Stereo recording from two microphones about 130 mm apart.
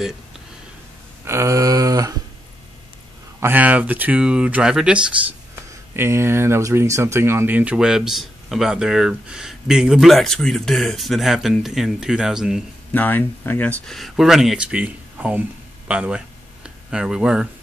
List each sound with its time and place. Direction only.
1.2 s a sound: 20° right (ahead or behind)
3.3 s speech: 15° right (ahead or behind)
5.9 s speech: 20° right (ahead or behind)
12.9 s speech: 15° left (ahead or behind); by 17.5 s 5° right (ahead or behind)